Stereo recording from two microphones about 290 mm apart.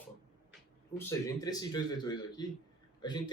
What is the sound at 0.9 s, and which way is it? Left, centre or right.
A man's voice, centre.